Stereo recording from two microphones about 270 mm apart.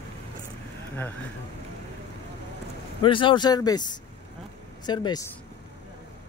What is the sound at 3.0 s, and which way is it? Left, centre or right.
Speech, centre.